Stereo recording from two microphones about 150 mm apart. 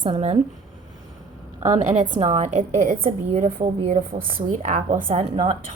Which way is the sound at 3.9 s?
65° right (ahead or behind).